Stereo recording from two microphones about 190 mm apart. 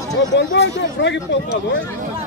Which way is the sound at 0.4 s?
70° left (ahead or behind).